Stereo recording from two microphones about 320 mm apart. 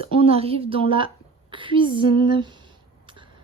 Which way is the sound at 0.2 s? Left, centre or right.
Centre.